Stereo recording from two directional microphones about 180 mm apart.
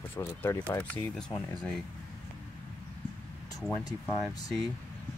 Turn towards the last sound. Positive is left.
turn(degrees=20)  # may be behind; listen again after turning